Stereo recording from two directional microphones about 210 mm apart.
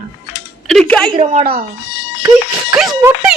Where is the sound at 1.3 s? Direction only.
40° right (ahead or behind).